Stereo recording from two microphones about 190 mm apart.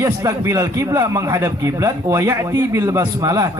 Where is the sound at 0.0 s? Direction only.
15° right (ahead or behind).